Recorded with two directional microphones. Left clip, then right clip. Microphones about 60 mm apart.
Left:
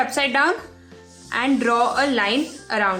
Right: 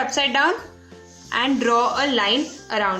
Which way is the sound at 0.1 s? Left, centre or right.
Left.